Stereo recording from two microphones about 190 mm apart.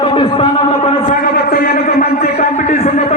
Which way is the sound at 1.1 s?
50° left (ahead or behind).